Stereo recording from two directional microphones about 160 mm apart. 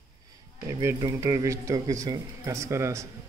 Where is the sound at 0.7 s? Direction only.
20° right (ahead or behind).